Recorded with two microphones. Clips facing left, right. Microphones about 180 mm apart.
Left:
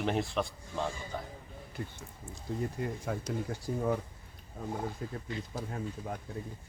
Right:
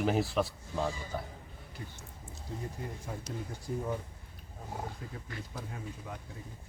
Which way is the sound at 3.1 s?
75° left (ahead or behind).